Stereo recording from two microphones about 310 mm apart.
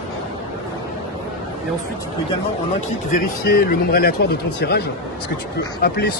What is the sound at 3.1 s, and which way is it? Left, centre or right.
Speech, left.